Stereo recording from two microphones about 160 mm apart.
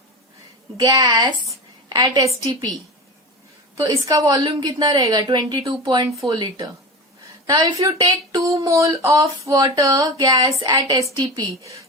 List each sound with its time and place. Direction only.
0.8 s speech: 25° right (ahead or behind)
4.0 s speech: 25° right (ahead or behind)